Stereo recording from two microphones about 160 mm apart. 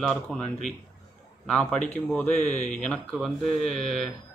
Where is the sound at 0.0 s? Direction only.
Centre (ahead or behind).